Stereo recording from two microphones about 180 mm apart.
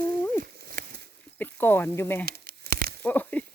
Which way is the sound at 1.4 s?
10° left (ahead or behind).